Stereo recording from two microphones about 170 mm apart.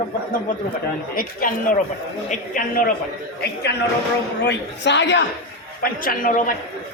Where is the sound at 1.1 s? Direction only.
55° left (ahead or behind).